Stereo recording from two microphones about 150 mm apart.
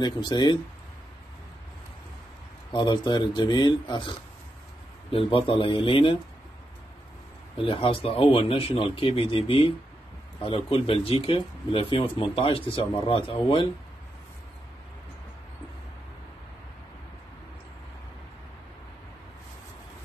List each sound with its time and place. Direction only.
0.0 s speech: 30° left (ahead or behind)
2.7 s speech: 30° left (ahead or behind)
5.1 s speech: 35° left (ahead or behind)
7.5 s speech: 35° left (ahead or behind)